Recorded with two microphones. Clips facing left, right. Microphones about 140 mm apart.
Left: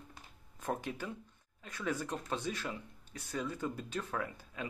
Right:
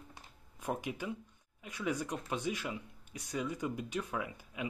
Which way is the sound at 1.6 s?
15° right (ahead or behind).